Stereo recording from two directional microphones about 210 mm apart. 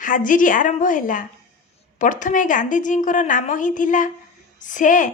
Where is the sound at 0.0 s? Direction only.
40° left (ahead or behind).